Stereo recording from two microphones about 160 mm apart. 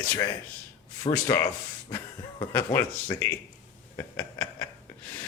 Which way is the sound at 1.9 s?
20° left (ahead or behind).